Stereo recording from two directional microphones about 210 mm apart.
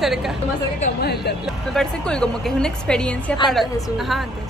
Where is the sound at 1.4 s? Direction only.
Centre (ahead or behind).